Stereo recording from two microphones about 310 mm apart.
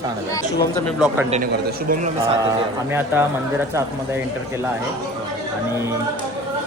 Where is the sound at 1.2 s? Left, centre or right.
Right.